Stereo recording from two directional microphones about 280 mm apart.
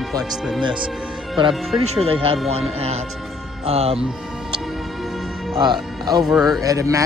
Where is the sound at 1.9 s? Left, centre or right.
Right.